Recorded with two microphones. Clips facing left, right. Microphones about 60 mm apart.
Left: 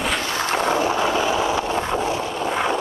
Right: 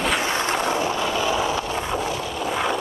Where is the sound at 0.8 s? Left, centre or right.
Centre.